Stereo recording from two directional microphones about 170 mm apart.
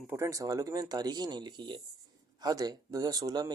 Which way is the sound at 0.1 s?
20° right (ahead or behind).